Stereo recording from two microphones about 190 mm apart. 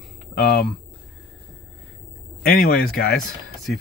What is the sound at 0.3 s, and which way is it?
Speech, 50° left (ahead or behind).